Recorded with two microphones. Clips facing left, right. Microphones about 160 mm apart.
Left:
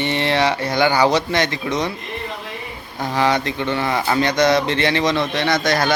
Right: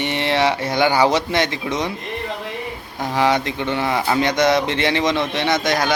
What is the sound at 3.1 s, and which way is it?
Speech, 15° right (ahead or behind).